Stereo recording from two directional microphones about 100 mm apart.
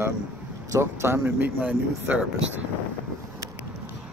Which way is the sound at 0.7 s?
25° right (ahead or behind).